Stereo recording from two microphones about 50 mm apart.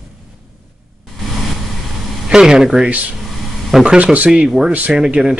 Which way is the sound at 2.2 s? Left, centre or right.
Centre.